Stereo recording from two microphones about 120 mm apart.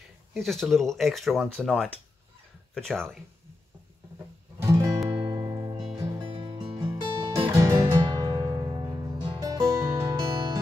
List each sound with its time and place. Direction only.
0.3 s speech: centre (ahead or behind)
4.6 s music: 25° right (ahead or behind)
6.3 s music: 45° right (ahead or behind)
7.3 s music: 25° right (ahead or behind)